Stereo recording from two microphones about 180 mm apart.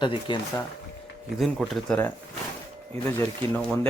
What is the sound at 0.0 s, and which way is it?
Speech, 25° left (ahead or behind).